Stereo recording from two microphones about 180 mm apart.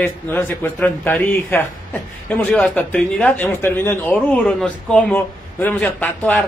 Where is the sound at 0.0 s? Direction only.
10° left (ahead or behind).